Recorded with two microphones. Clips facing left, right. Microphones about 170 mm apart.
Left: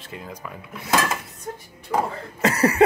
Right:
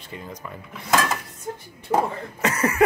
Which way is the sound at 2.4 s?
30° left (ahead or behind).